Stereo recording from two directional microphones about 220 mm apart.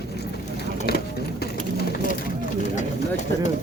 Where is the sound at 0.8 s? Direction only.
45° left (ahead or behind).